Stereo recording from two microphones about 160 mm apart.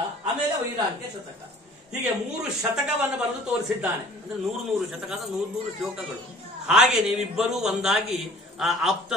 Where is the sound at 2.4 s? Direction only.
5° right (ahead or behind).